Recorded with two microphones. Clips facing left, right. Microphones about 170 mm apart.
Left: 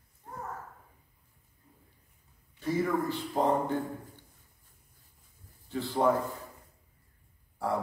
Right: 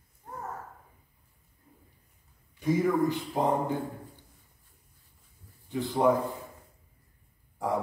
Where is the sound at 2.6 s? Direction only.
15° right (ahead or behind).